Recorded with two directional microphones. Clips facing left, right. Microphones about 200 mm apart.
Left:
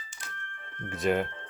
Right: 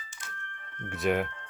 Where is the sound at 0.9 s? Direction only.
Centre (ahead or behind).